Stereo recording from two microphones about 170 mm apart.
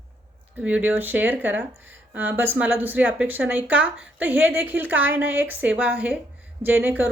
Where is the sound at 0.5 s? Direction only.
10° right (ahead or behind).